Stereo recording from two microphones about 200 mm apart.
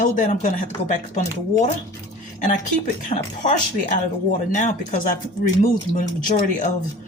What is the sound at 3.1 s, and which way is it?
Speech, 40° left (ahead or behind).